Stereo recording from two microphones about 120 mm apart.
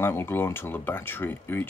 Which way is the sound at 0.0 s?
20° left (ahead or behind).